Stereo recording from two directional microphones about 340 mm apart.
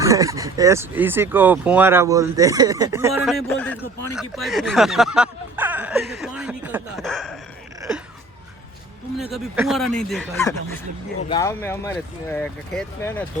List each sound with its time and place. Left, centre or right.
0.0 s speech: centre
7.8 s a sound: centre
9.3 s speech: centre